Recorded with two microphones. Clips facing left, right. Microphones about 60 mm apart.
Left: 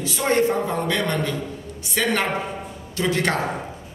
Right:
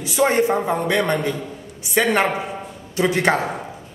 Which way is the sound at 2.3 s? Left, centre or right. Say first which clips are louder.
Right 1 dB; centre.